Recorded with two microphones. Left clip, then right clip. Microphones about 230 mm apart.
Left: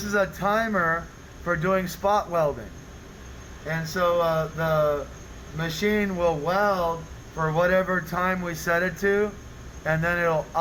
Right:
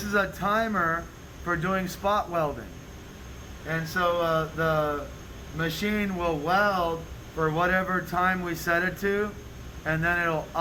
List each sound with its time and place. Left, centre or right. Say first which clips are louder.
0.1 s speech: left 2 dB; left
3.7 s speech: left 2 dB; left